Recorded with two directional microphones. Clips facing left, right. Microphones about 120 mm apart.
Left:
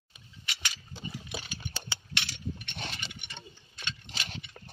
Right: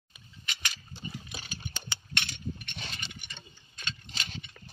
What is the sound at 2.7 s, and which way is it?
Engine, 70° left (ahead or behind).